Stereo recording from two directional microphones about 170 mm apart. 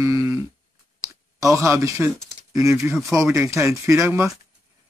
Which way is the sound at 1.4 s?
15° right (ahead or behind).